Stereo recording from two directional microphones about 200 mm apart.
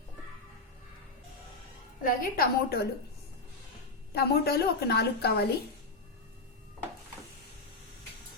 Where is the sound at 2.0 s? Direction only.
45° left (ahead or behind).